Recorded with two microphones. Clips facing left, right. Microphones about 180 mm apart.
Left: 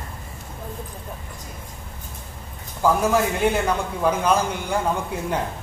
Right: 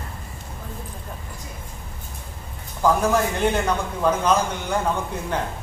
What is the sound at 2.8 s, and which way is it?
A man's voice, 10° left (ahead or behind).